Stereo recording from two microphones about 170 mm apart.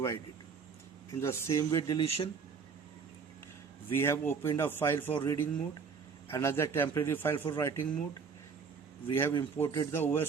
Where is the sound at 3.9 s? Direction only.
15° left (ahead or behind).